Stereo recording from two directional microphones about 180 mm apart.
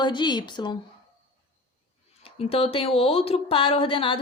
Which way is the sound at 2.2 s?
30° left (ahead or behind).